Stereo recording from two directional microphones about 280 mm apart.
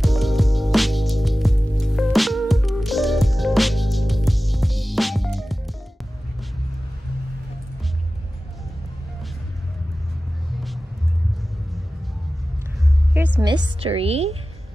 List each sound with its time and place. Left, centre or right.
0.0 s music: centre
13.4 s a woman's voice: centre